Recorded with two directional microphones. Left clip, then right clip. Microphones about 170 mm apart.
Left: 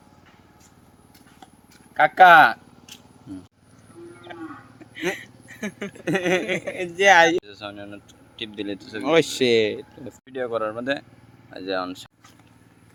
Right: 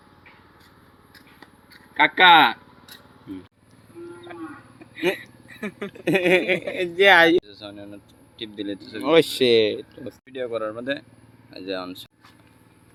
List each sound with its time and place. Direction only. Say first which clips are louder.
2.0 s speech: left 2 dB; 30° left (ahead or behind)
5.2 s a sound: even; 15° left (ahead or behind)
6.1 s speech: right 4 dB; 35° right (ahead or behind)
7.4 s speech: left 3 dB; 10° left (ahead or behind)
9.0 s speech: right 2 dB; centre (ahead or behind)